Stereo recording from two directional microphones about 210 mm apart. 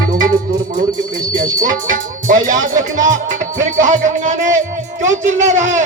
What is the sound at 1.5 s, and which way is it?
Speech, 40° right (ahead or behind).